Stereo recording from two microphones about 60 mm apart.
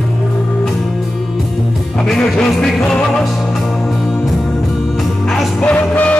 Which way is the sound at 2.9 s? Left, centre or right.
Centre.